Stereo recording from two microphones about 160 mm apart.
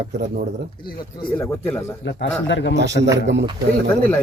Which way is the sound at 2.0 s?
90° left.